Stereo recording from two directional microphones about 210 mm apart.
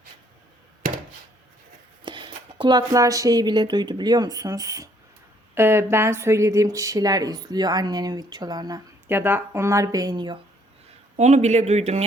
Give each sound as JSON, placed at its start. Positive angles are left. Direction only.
{"t": 2.0, "sound": "speech", "side_deg": -25}
{"t": 11.2, "sound": "speech", "side_deg": -35}